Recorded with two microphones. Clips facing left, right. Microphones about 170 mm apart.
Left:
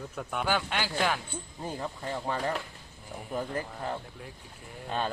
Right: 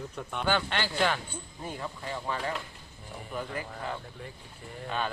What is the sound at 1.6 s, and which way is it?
Speech, 40° left (ahead or behind).